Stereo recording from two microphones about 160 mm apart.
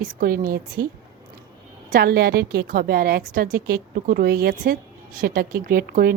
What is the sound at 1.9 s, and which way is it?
A woman's voice, 70° right (ahead or behind).